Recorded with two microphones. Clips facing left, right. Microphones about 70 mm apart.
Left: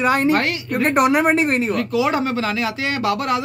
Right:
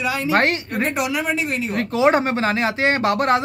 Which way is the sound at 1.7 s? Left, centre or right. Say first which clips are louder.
Right 2 dB; right.